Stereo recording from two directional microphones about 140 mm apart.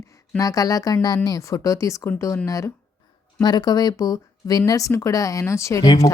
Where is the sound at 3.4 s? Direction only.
30° left (ahead or behind).